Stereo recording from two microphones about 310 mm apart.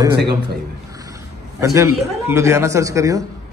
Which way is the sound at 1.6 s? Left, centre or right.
Centre.